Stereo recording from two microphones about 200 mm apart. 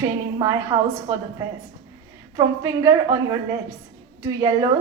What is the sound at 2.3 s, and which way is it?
A woman's voice, 15° right (ahead or behind).